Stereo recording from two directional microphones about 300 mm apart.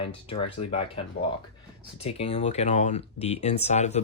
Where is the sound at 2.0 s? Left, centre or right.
Centre.